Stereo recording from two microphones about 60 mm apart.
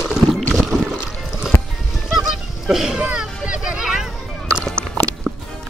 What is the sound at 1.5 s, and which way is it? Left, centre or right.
Music, left.